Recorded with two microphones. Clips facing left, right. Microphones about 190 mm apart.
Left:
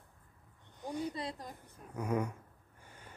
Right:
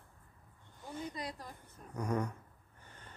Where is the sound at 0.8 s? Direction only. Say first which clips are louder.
Left 5 dB; 15° left (ahead or behind).